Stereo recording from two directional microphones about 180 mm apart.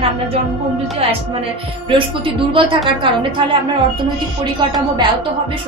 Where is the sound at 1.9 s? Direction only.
30° right (ahead or behind).